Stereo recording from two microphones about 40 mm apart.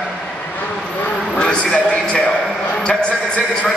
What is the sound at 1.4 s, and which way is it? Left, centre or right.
Speech, left.